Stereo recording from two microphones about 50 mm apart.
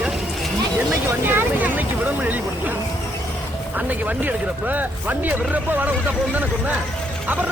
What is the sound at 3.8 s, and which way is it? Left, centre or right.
Speech, right.